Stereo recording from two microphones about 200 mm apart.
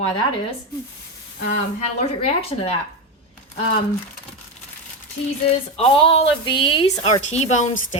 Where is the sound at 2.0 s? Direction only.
30° left (ahead or behind).